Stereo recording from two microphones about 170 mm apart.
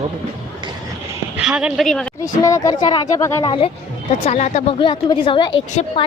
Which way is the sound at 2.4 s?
20° left (ahead or behind).